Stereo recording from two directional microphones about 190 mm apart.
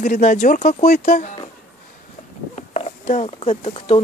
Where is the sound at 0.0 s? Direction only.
45° left (ahead or behind).